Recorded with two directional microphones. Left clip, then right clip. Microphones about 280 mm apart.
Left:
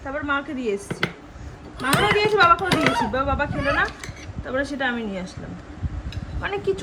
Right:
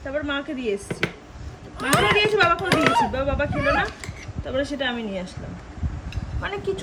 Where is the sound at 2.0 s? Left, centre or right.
Centre.